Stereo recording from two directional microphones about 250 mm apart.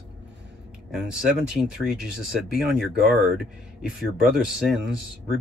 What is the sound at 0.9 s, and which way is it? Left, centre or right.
Speech, centre.